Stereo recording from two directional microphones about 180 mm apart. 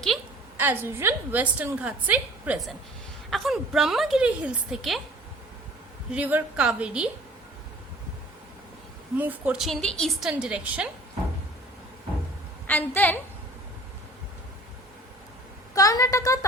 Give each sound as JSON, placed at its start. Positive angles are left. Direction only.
{"t": 0.5, "sound": "a woman's voice", "side_deg": -10}
{"t": 6.1, "sound": "a woman's voice", "side_deg": -10}
{"t": 9.1, "sound": "a woman's voice", "side_deg": -10}
{"t": 12.6, "sound": "a woman's voice", "side_deg": 10}
{"t": 15.7, "sound": "a woman's voice", "side_deg": 20}